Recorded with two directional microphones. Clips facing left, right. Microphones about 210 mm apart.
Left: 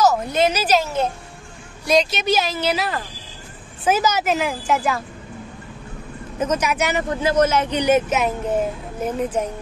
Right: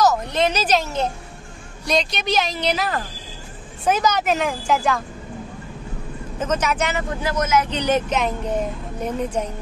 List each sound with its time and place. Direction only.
0.3 s a woman's voice: 5° left (ahead or behind)
6.4 s a woman's voice: 10° left (ahead or behind)
7.0 s speech: 25° left (ahead or behind)
7.7 s a woman's voice: 10° left (ahead or behind)